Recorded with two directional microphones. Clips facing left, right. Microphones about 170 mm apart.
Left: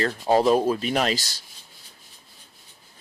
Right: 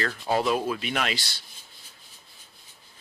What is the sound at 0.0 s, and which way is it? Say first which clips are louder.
Speech: left 6 dB; 35° left (ahead or behind).